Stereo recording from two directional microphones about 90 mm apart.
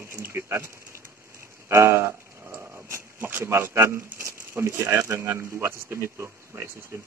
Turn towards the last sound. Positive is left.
turn(degrees=-30)  # may be behind; listen again after turning